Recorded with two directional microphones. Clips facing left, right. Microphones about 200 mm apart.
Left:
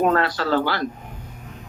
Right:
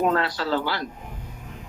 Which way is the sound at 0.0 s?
50° left (ahead or behind).